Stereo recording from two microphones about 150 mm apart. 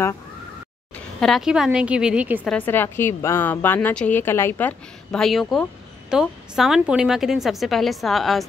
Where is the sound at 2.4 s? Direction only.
10° left (ahead or behind).